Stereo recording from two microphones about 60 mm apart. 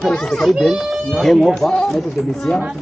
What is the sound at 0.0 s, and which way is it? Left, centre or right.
Speech, centre.